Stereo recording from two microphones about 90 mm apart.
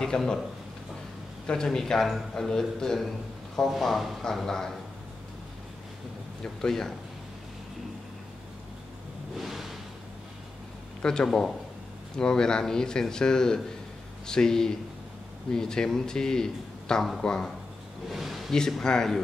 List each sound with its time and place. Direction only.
0.0 s a man's voice: 5° left (ahead or behind)
1.5 s a man's voice: 5° left (ahead or behind)
6.4 s a man's voice: 5° left (ahead or behind)
9.4 s a sound: centre (ahead or behind)
11.0 s a man's voice: 10° left (ahead or behind)